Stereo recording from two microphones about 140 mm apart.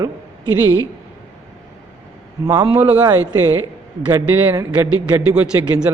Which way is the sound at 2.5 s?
25° right (ahead or behind).